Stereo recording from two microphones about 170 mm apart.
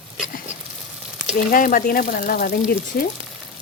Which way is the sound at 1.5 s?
55° left (ahead or behind).